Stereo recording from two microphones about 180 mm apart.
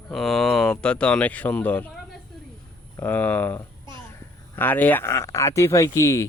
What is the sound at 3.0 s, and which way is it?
Speech, 10° left (ahead or behind).